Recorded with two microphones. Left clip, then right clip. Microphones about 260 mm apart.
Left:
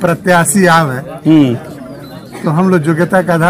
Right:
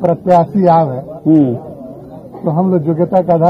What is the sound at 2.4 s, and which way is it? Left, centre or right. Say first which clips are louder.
Speech: left 2 dB; left.